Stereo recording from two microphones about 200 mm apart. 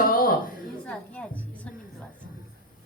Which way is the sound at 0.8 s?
5° left (ahead or behind).